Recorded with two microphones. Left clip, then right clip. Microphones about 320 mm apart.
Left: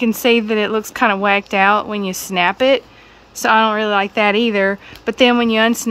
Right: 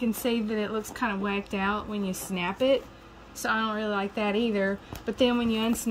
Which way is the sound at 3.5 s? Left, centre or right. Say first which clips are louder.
Left 16 dB; centre.